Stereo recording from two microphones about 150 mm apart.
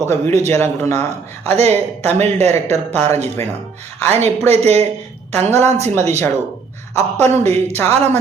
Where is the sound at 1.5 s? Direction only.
45° right (ahead or behind).